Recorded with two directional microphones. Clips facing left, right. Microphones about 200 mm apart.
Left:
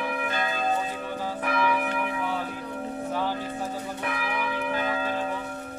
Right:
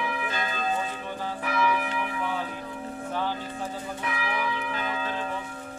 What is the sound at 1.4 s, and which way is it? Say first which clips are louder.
Church bell: left 1 dB; 55° left (ahead or behind).